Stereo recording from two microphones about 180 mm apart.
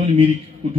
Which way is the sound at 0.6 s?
30° right (ahead or behind).